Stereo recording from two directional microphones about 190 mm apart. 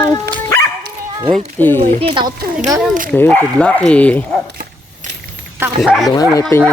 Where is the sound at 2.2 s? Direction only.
50° right (ahead or behind).